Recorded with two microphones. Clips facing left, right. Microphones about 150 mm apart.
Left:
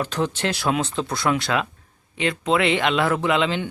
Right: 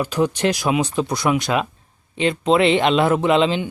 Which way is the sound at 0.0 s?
10° right (ahead or behind).